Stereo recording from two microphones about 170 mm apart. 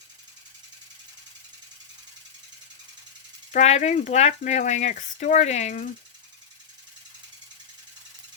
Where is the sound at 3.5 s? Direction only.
45° left (ahead or behind).